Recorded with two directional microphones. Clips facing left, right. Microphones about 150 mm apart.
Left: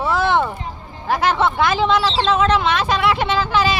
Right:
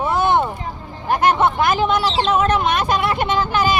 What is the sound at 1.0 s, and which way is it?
Speech, 90° left.